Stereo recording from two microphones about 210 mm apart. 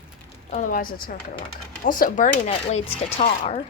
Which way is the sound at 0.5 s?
40° left (ahead or behind).